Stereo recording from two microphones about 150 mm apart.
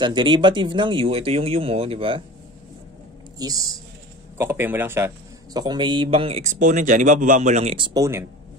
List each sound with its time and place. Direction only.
0.0 s speech: 30° right (ahead or behind)
3.3 s a man's voice: 25° right (ahead or behind)
5.6 s speech: 30° right (ahead or behind)
6.4 s speech: 55° right (ahead or behind)
7.7 s speech: 35° right (ahead or behind)
8.0 s a man's voice: 20° right (ahead or behind)